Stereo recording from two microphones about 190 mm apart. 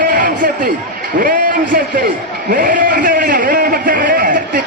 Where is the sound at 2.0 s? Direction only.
45° right (ahead or behind).